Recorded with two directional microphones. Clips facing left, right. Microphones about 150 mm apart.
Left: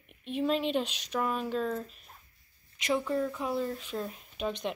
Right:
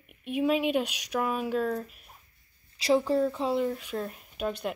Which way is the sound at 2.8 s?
30° right (ahead or behind).